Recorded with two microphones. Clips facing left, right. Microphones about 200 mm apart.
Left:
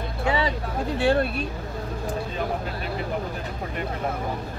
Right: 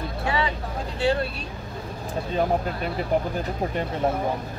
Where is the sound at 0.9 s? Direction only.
55° left (ahead or behind).